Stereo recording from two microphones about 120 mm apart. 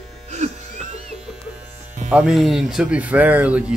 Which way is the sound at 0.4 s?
80° right.